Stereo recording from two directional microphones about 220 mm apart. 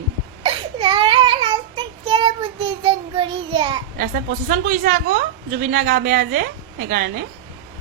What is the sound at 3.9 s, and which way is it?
Speech, 35° right (ahead or behind).